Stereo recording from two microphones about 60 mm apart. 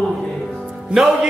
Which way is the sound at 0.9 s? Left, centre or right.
Centre.